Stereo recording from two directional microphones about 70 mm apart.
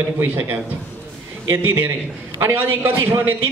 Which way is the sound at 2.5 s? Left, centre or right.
Right.